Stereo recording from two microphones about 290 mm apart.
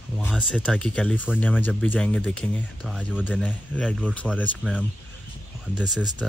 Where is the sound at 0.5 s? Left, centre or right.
Centre.